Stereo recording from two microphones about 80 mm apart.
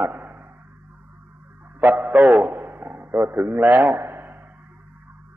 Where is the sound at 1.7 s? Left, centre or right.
Right.